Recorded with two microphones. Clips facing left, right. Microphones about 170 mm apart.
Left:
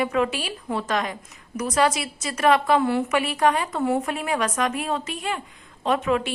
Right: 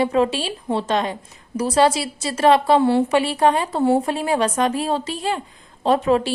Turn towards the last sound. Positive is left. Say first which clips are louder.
# right 5 dB
turn(degrees=-35)  # may be behind; listen again after turning